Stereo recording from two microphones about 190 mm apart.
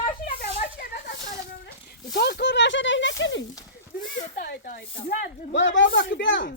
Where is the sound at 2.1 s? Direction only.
55° left (ahead or behind); by 3.5 s 75° left (ahead or behind).